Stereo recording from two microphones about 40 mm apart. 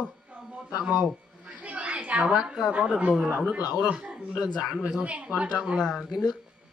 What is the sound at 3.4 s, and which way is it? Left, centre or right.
Speech, right.